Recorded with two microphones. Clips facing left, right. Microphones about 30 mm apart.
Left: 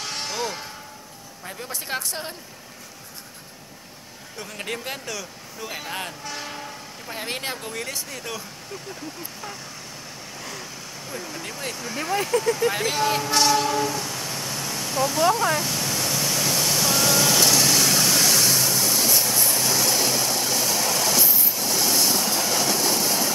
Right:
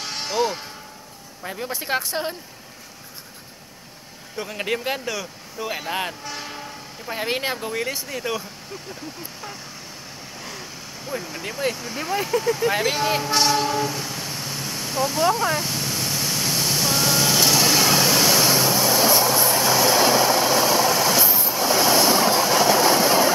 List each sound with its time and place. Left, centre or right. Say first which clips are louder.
0.0 s a sound: right 5 dB; centre
1.4 s speech: right 5 dB; centre
4.4 s speech: right 6 dB; centre
7.1 s speech: right 5 dB; centre
10.4 s vehicle: even; centre